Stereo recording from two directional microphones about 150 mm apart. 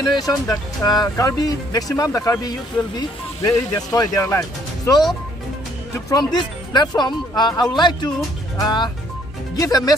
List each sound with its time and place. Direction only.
0.1 s speech: 25° left (ahead or behind)